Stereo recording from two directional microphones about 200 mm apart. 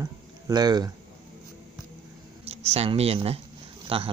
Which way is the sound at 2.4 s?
30° right (ahead or behind).